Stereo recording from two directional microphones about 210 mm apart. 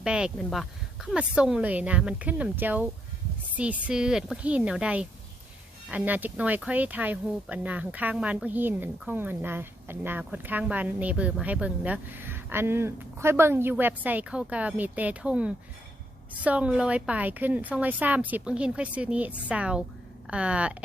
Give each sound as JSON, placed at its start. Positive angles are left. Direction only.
{"t": 0.0, "sound": "speech", "side_deg": -5}